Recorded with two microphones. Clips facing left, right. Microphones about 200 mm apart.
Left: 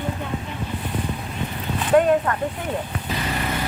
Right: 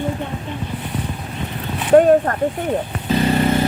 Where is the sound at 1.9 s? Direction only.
45° right (ahead or behind).